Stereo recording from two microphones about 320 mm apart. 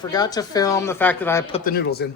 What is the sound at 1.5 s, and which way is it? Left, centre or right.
Speech, left.